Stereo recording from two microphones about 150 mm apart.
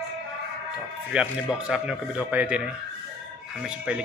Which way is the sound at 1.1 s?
5° right (ahead or behind).